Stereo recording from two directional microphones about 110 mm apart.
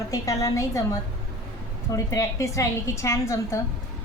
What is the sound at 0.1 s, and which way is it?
Speech, 30° left (ahead or behind).